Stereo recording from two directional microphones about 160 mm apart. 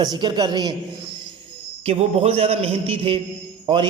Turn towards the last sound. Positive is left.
turn(degrees=-30)  # may be behind; listen again after turning